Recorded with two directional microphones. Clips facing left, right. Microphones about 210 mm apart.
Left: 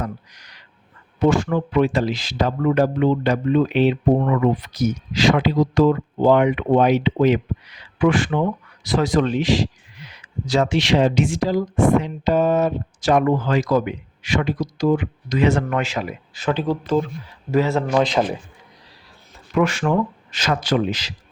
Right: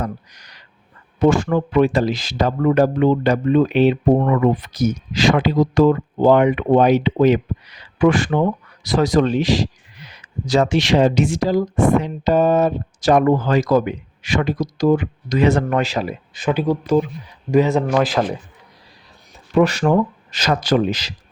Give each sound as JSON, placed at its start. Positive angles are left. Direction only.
{"t": 0.0, "sound": "speech", "side_deg": -40}
{"t": 16.3, "sound": "speech", "side_deg": -15}
{"t": 17.9, "sound": "a man's voice", "side_deg": -5}
{"t": 19.5, "sound": "speech", "side_deg": -35}